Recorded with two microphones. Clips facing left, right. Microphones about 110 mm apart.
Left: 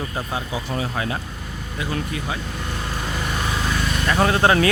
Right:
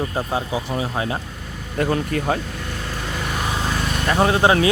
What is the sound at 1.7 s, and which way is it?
Speech, 50° right (ahead or behind).